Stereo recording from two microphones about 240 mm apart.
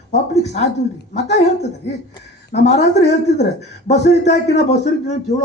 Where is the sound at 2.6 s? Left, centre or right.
Left.